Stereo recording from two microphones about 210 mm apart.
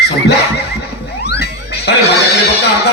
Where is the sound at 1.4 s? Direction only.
50° left (ahead or behind).